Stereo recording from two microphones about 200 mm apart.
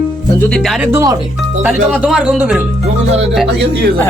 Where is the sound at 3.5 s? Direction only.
55° right (ahead or behind).